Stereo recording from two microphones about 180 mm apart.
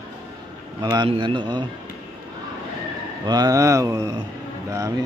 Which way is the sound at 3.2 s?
20° right (ahead or behind).